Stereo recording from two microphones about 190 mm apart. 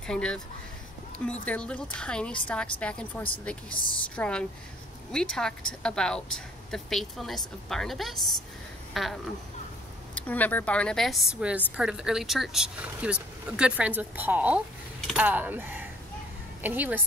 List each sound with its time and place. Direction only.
0.0 s a woman's voice: 5° left (ahead or behind)
1.4 s a woman's voice: 5° left (ahead or behind); by 17.0 s 10° right (ahead or behind)